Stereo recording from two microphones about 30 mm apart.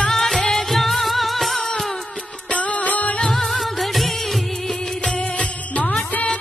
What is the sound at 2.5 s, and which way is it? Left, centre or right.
Music, left.